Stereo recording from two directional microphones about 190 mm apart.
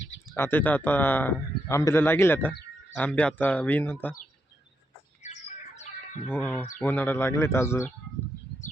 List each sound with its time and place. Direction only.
0.3 s speech: 10° left (ahead or behind)
5.2 s bird: 35° left (ahead or behind)
6.2 s speech: 10° left (ahead or behind)